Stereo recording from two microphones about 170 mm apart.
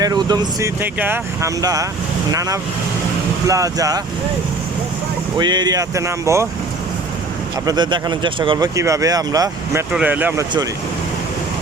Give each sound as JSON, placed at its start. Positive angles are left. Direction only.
{"t": 0.0, "sound": "speech", "side_deg": -25}
{"t": 5.4, "sound": "speech", "side_deg": -25}
{"t": 7.6, "sound": "speech", "side_deg": -25}
{"t": 9.9, "sound": "speech", "side_deg": -10}